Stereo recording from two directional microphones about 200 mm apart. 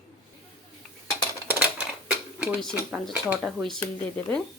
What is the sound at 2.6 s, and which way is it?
Speech, centre (ahead or behind).